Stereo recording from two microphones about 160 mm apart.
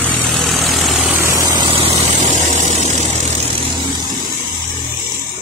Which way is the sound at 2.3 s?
50° right (ahead or behind).